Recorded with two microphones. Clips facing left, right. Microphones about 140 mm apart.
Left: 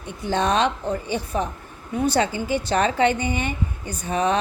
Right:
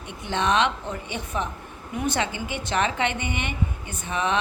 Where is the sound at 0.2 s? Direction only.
35° left (ahead or behind).